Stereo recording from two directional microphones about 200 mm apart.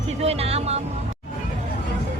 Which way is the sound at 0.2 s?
30° right (ahead or behind).